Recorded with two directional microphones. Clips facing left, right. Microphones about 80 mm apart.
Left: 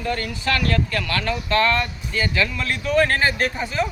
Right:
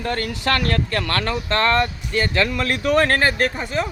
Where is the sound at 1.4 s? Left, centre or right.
Right.